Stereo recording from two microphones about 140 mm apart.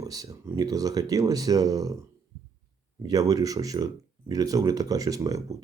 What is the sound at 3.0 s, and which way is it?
Speech, 25° right (ahead or behind).